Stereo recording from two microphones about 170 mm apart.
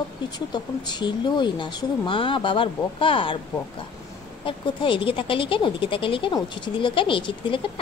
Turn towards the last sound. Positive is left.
turn(degrees=30)  # may be behind; listen again after turning